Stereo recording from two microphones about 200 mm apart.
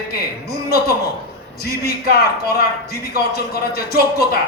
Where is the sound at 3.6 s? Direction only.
50° left (ahead or behind).